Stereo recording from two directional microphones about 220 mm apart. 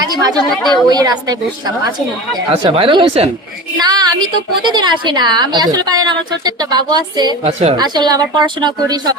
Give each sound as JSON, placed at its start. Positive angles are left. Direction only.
{"t": 0.1, "sound": "a woman's voice", "side_deg": -15}
{"t": 0.5, "sound": "a woman's voice", "side_deg": 0}
{"t": 0.9, "sound": "a woman's voice", "side_deg": -15}
{"t": 7.8, "sound": "a woman's voice", "side_deg": -20}